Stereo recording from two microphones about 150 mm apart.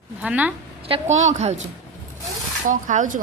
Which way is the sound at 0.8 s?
45° right (ahead or behind).